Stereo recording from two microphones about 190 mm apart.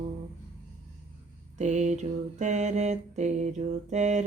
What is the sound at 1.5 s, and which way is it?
Mantra, 40° right (ahead or behind).